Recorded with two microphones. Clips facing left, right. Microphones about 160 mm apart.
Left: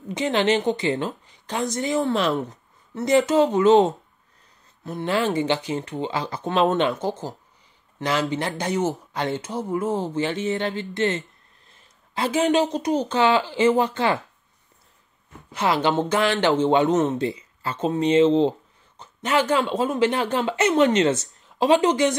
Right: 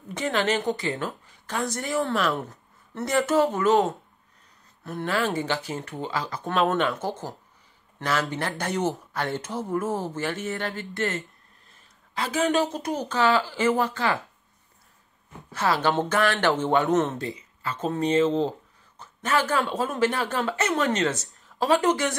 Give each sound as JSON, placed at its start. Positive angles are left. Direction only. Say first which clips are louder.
{"t": 0.1, "sound": "speech", "louder": "left 4 dB", "side_deg": 20}
{"t": 5.0, "sound": "speech", "louder": "left 4 dB", "side_deg": 25}
{"t": 15.5, "sound": "speech", "louder": "left 2 dB", "side_deg": 15}
{"t": 17.3, "sound": "speech", "louder": "left 3 dB", "side_deg": 30}